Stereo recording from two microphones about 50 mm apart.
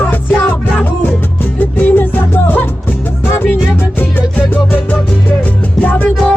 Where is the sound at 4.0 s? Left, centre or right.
Left.